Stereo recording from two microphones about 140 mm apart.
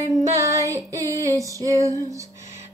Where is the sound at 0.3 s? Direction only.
20° right (ahead or behind).